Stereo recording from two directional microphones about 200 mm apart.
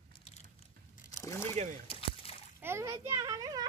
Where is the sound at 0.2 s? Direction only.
35° left (ahead or behind).